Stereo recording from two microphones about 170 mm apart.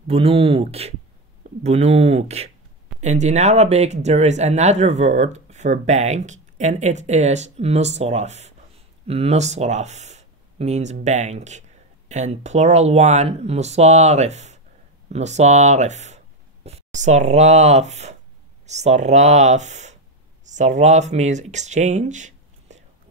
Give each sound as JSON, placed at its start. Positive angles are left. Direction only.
{"t": 0.0, "sound": "speech", "side_deg": -35}